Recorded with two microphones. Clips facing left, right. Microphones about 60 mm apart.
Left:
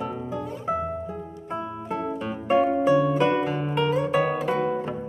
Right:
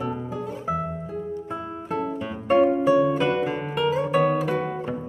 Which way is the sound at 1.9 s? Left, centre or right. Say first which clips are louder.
Right 1 dB; centre.